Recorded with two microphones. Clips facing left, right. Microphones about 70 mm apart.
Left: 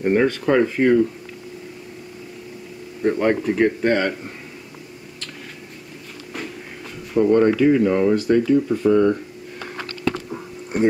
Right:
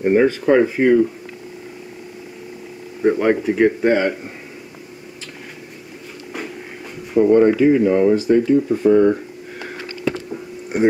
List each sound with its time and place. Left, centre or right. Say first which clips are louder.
0.0 s speech: right 3 dB; centre
3.0 s speech: right 3 dB; centre
7.2 s speech: right 3 dB; centre
8.6 s speech: right 3 dB; centre
8.9 s speech: right 3 dB; right
9.6 s a sound: right 1 dB; centre